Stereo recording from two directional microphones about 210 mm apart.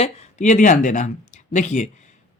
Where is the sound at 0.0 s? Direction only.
35° left (ahead or behind).